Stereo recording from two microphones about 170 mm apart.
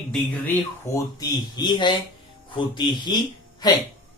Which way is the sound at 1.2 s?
25° left (ahead or behind).